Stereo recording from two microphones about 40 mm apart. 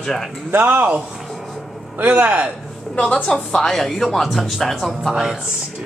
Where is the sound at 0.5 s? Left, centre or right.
Right.